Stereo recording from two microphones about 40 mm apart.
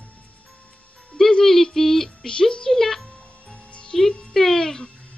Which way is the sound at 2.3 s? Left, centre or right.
Left.